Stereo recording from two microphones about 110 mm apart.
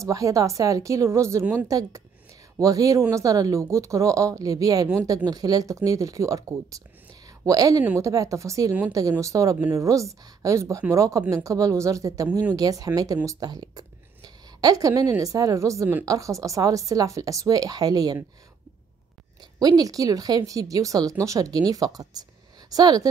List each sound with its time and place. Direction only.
0.0 s speech: 30° right (ahead or behind)
19.6 s speech: 35° right (ahead or behind)